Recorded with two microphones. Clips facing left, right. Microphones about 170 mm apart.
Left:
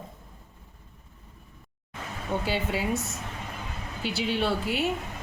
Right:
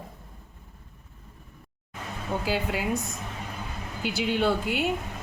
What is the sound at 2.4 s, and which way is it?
Speech, centre (ahead or behind).